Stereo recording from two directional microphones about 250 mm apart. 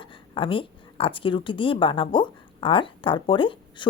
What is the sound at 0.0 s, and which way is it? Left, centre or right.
A woman's voice, centre.